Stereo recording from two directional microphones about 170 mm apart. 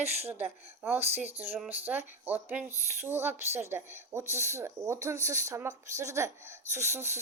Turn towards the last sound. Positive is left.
turn(degrees=-15)  # may be behind; listen again after turning